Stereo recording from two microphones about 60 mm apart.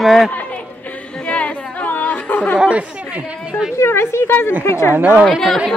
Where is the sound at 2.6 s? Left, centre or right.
Right.